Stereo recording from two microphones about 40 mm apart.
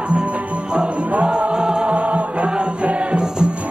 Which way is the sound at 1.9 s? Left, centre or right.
Right.